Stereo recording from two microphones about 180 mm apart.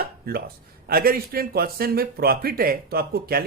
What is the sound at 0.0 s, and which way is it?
Speech, 55° right (ahead or behind).